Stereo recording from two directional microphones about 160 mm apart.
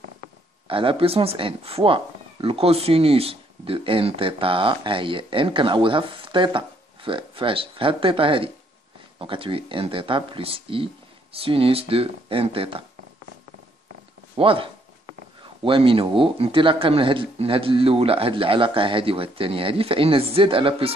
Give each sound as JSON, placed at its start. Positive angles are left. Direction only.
{"t": 0.7, "sound": "speech", "side_deg": -35}
{"t": 14.3, "sound": "speech", "side_deg": -35}